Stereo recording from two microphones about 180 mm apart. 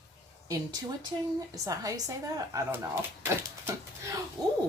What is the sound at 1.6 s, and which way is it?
A woman's voice, 20° right (ahead or behind).